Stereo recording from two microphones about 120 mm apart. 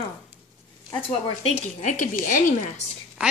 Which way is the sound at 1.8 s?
85° left.